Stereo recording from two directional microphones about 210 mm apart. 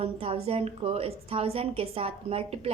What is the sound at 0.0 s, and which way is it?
A woman's voice, 30° right (ahead or behind).